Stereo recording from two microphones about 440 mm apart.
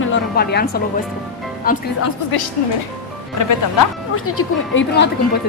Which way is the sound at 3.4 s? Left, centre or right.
Left.